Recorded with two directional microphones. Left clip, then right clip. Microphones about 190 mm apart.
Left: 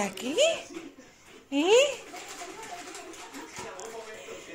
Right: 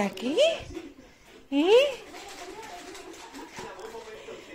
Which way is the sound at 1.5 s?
25° right (ahead or behind).